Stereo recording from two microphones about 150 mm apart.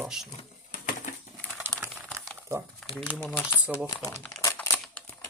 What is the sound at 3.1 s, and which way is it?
Speech, 10° left (ahead or behind).